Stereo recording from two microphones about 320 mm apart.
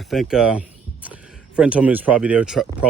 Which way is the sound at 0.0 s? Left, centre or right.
Centre.